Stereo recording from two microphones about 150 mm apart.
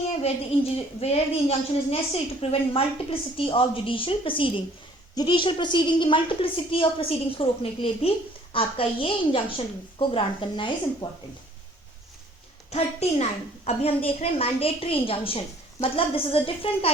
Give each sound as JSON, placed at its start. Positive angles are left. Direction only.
{"t": 0.2, "sound": "speech", "side_deg": 45}
{"t": 12.7, "sound": "a woman's voice", "side_deg": 45}